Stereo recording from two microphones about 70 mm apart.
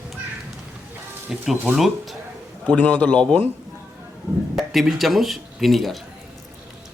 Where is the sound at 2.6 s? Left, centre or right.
Centre.